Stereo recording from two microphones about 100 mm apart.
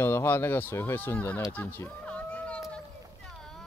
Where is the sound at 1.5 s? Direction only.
20° left (ahead or behind).